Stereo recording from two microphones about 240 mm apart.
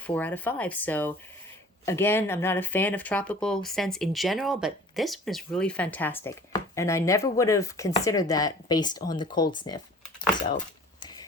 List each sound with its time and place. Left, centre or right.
0.0 s speech: centre
9.6 s typing: centre
11.0 s a sound: centre